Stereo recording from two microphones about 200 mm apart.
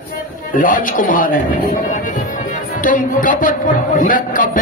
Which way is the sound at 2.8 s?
40° left (ahead or behind).